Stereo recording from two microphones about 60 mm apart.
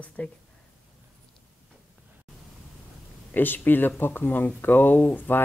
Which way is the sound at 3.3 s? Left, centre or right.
Left.